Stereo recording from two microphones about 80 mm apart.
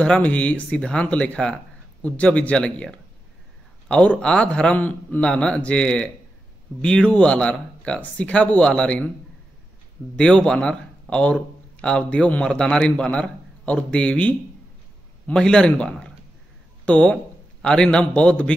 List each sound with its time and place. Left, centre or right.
0.0 s a man's voice: centre
10.1 s a man's voice: centre